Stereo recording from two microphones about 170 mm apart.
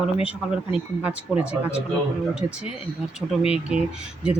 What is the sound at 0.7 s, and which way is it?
Speech, 5° right (ahead or behind).